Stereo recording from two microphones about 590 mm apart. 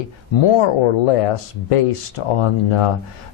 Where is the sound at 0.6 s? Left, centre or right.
Left.